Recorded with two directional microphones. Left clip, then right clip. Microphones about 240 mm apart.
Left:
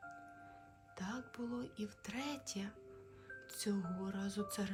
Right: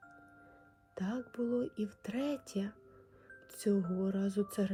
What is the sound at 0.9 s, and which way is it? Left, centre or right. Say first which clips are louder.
Speech: right 6 dB; centre.